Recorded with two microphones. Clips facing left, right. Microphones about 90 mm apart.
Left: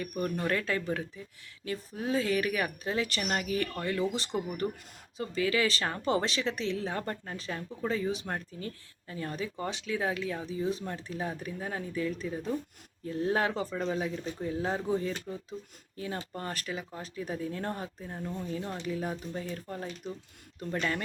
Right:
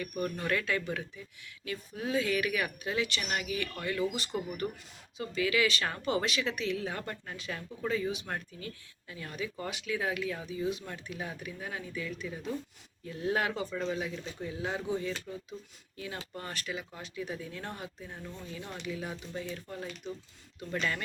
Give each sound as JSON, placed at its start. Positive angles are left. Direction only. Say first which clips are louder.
{"t": 0.2, "sound": "speech", "louder": "left 2 dB", "side_deg": 30}